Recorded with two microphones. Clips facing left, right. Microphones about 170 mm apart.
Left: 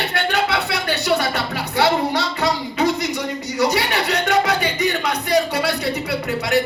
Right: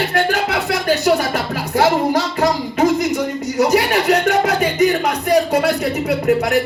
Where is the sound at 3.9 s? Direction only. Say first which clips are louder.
Right 6 dB; 35° right (ahead or behind).